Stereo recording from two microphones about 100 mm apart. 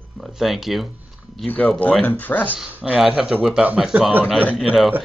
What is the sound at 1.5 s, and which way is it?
Speech, 15° left (ahead or behind).